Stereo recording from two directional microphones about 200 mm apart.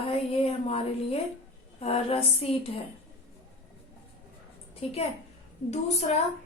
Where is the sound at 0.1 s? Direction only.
30° left (ahead or behind).